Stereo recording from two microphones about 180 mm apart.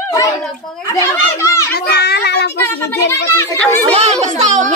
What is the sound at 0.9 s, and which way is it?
Speech, 15° left (ahead or behind).